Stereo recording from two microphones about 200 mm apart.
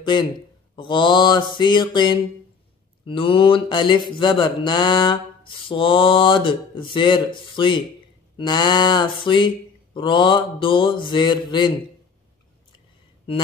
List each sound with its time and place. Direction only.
0.0 s speech: 25° left (ahead or behind)
0.7 s mantra: 25° left (ahead or behind)